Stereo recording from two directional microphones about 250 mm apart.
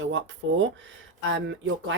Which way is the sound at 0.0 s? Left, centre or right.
Right.